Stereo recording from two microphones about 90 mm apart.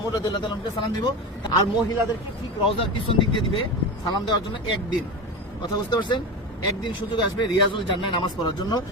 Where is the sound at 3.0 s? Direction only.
70° left (ahead or behind).